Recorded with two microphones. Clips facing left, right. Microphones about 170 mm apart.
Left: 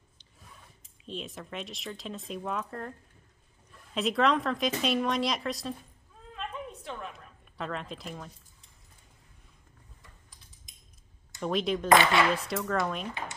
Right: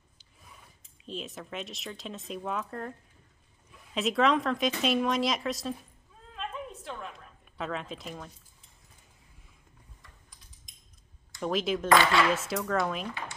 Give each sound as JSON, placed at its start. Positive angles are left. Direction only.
{"t": 1.0, "sound": "speech", "side_deg": 0}
{"t": 6.3, "sound": "a sound", "side_deg": 0}
{"t": 11.3, "sound": "speech", "side_deg": 0}
{"t": 11.9, "sound": "speech", "side_deg": 20}
{"t": 12.4, "sound": "speech", "side_deg": 0}